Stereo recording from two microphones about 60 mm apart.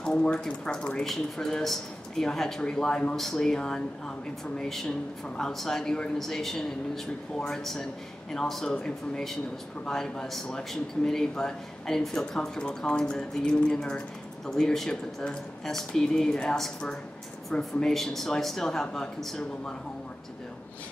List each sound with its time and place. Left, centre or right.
0.0 s speech: centre